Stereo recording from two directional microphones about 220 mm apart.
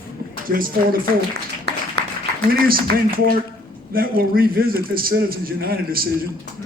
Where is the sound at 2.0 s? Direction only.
50° right (ahead or behind).